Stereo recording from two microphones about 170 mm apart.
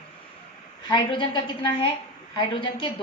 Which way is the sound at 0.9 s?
25° left (ahead or behind).